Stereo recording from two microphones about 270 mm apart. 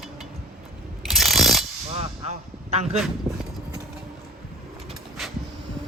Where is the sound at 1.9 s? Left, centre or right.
Right.